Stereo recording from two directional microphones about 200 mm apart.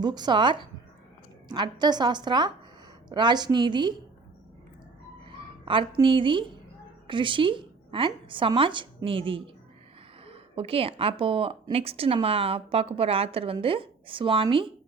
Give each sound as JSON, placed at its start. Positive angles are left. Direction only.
{"t": 0.0, "sound": "a woman's voice", "side_deg": -20}
{"t": 5.6, "sound": "a woman's voice", "side_deg": -25}